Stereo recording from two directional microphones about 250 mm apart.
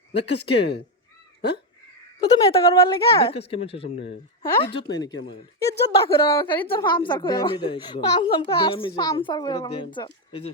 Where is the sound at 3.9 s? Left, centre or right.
Left.